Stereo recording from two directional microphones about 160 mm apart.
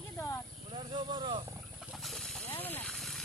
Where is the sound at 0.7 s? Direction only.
30° right (ahead or behind).